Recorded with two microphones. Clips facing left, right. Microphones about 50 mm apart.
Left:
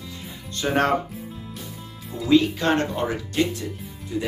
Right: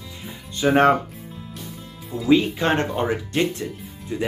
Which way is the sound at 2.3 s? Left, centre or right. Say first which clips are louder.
Even; right.